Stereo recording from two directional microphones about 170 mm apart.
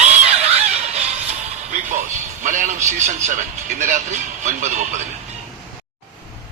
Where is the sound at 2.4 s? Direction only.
50° right (ahead or behind).